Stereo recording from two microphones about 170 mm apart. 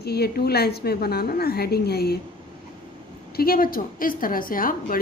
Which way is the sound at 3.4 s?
60° left (ahead or behind).